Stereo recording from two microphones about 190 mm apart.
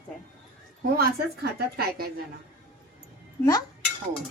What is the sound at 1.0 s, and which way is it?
A woman's voice, 55° right (ahead or behind).